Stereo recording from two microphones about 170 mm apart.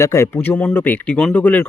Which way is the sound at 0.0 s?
15° left (ahead or behind).